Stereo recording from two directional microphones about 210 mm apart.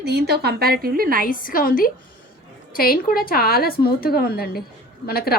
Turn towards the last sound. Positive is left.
turn(degrees=45)  # may be behind; listen again after turning